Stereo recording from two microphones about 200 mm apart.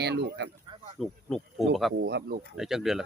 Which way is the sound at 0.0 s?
55° right (ahead or behind).